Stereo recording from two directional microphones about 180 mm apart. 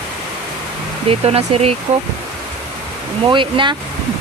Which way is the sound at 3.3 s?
25° right (ahead or behind).